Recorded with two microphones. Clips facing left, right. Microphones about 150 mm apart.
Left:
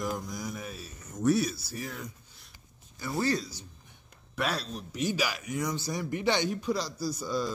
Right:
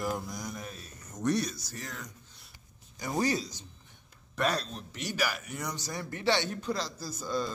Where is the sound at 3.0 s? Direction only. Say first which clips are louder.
Even; 15° right (ahead or behind).